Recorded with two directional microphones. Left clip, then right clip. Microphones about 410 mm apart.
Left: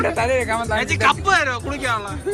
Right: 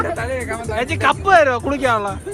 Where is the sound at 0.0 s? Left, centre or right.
Left.